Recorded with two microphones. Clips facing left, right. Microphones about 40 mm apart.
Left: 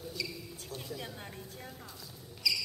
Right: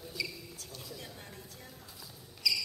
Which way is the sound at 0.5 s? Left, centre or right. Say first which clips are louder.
Left 4 dB; left.